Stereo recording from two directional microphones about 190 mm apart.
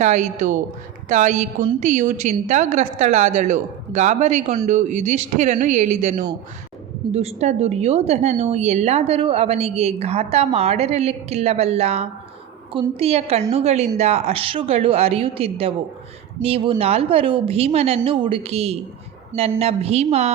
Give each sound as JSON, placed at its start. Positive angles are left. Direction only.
{"t": 0.0, "sound": "a woman's voice", "side_deg": -40}